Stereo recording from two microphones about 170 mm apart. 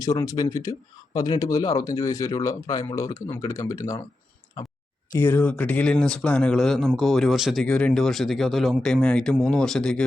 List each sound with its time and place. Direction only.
0.0 s speech: 20° left (ahead or behind)
4.6 s a sound: 25° left (ahead or behind)
5.1 s speech: 10° left (ahead or behind)